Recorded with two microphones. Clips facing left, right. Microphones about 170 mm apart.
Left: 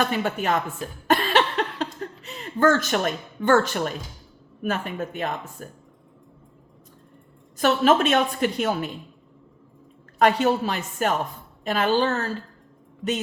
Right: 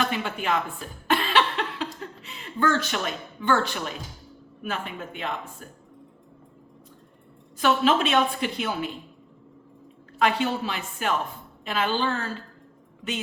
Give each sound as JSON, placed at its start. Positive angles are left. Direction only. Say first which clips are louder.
{"t": 0.1, "sound": "a woman's voice", "louder": "left 3 dB", "side_deg": 45}
{"t": 1.0, "sound": "a sound", "louder": "left 2 dB", "side_deg": 45}
{"t": 4.6, "sound": "a woman's voice", "louder": "left 5 dB", "side_deg": 45}
{"t": 7.6, "sound": "a woman's voice", "louder": "left 3 dB", "side_deg": 45}
{"t": 10.2, "sound": "a woman's voice", "louder": "left 4 dB", "side_deg": 45}